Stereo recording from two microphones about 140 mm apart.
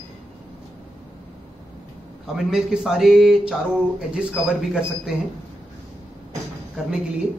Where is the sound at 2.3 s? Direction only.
5° right (ahead or behind).